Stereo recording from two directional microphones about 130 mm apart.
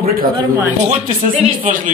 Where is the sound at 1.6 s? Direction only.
90° right.